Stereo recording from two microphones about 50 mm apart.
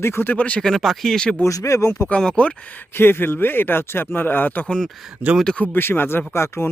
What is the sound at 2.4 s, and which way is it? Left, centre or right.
Speech, left.